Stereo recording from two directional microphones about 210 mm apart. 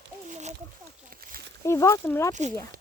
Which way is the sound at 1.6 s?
15° left (ahead or behind).